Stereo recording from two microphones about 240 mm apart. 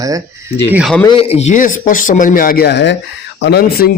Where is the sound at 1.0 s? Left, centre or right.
Left.